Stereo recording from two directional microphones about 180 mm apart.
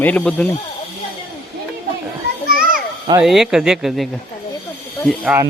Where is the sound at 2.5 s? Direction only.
50° right (ahead or behind).